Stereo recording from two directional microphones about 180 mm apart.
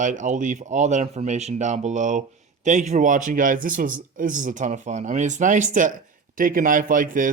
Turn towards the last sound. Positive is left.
turn(degrees=-45)  # may be behind; listen again after turning